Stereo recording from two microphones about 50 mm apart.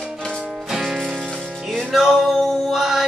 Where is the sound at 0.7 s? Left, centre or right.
Centre.